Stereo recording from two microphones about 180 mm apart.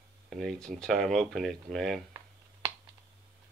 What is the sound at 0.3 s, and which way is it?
Speech, centre (ahead or behind).